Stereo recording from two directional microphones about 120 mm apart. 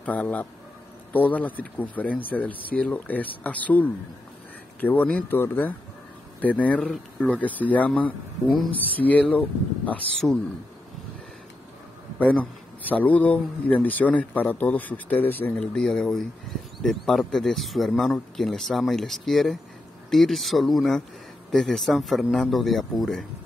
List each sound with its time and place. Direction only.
0.0 s a man's voice: 15° left (ahead or behind)
12.2 s a man's voice: 15° left (ahead or behind)